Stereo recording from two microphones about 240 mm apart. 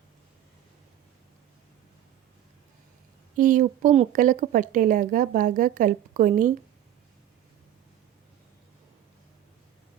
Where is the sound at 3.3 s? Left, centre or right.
Right.